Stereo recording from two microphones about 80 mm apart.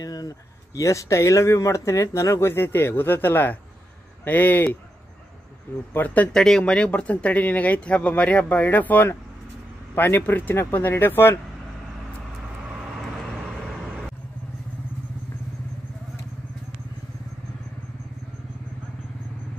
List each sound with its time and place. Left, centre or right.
0.0 s a sound: left
0.7 s speech: left
5.9 s speech: left